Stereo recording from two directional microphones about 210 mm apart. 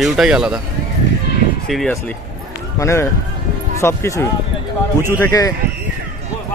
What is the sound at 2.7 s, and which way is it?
Speech, 15° left (ahead or behind).